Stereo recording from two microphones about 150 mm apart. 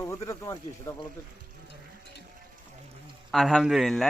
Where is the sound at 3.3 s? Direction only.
Centre (ahead or behind).